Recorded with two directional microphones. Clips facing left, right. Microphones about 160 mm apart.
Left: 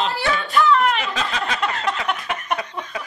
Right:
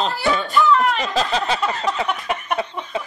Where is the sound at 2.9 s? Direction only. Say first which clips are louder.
Right 7 dB; 25° right (ahead or behind).